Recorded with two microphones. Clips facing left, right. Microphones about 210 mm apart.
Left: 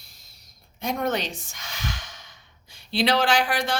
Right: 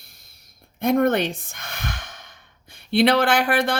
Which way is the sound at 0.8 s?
55° right (ahead or behind).